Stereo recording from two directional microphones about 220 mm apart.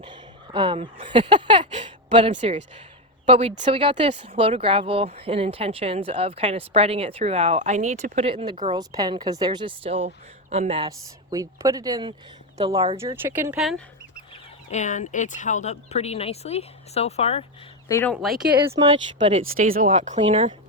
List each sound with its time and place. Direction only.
0.0 s a woman's voice: 20° right (ahead or behind)
13.2 s speech: 10° right (ahead or behind)
14.7 s speech: 35° left (ahead or behind)
17.8 s speech: 15° left (ahead or behind)
18.1 s speech: centre (ahead or behind)
18.7 s speech: 25° right (ahead or behind)
19.5 s speech: 40° right (ahead or behind)